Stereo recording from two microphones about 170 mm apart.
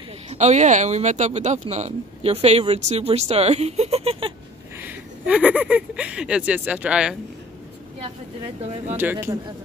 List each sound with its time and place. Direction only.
0.3 s speech: 40° right (ahead or behind)
4.7 s speech: 10° right (ahead or behind)
8.9 s speech: 10° right (ahead or behind)